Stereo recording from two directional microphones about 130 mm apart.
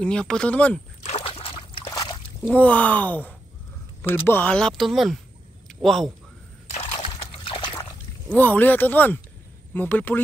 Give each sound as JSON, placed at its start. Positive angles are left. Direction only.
{"t": 0.0, "sound": "speech", "side_deg": 5}
{"t": 1.0, "sound": "slosh", "side_deg": 50}
{"t": 1.9, "sound": "a sound", "side_deg": 30}
{"t": 2.4, "sound": "a man's voice", "side_deg": 10}
{"t": 7.1, "sound": "trickle", "side_deg": 35}
{"t": 8.3, "sound": "speech", "side_deg": 15}